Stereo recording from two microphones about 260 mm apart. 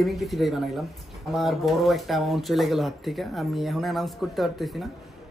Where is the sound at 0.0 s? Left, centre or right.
Centre.